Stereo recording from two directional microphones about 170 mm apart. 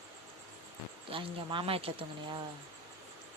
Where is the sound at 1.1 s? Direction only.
30° right (ahead or behind).